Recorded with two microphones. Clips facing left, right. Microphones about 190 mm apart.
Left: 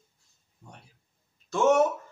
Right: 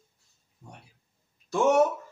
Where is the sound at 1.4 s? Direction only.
15° right (ahead or behind).